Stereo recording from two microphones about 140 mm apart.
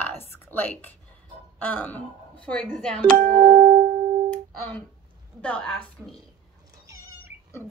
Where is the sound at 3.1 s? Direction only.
80° right.